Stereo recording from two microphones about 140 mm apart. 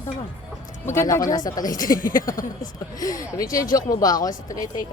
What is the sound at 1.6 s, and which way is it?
Speech, 75° left (ahead or behind).